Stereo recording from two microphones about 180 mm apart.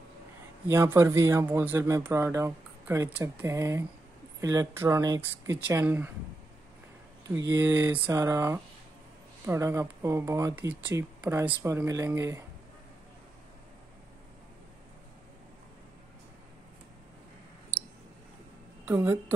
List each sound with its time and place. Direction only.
0.7 s speech: 15° right (ahead or behind)
7.5 s speech: 15° right (ahead or behind)
18.9 s speech: 10° right (ahead or behind)